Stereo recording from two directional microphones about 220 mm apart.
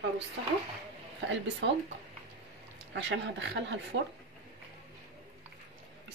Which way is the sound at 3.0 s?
55° right (ahead or behind).